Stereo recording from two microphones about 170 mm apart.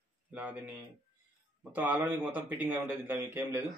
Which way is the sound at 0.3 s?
10° right (ahead or behind).